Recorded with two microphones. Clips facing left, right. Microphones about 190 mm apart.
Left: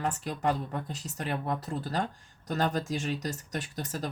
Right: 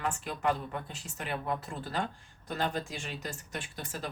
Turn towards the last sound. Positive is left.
turn(degrees=40)  # may be behind; listen again after turning